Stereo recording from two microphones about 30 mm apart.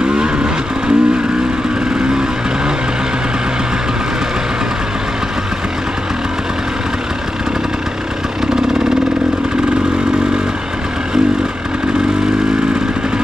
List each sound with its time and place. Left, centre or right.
0.0 s vehicle: right